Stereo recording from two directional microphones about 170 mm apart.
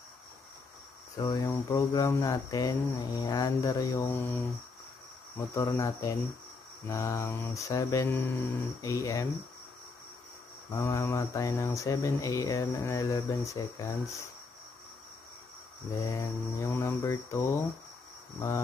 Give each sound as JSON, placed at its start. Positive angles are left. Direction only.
{"t": 1.1, "sound": "speech", "side_deg": 20}
{"t": 5.5, "sound": "mantra", "side_deg": 15}
{"t": 10.7, "sound": "speech", "side_deg": 15}
{"t": 16.0, "sound": "mantra", "side_deg": 15}